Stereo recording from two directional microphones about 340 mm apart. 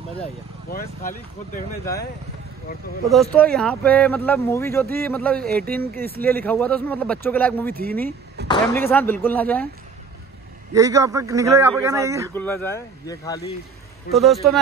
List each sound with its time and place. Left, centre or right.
0.7 s speech: left
3.1 s speech: centre
10.7 s a man's voice: centre
12.4 s speech: centre